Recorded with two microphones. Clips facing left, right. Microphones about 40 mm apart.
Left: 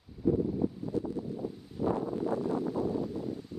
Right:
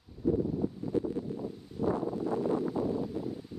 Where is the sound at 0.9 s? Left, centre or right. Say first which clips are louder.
Right 5 dB; right.